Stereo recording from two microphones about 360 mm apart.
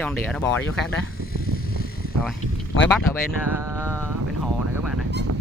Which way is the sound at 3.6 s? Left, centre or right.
Centre.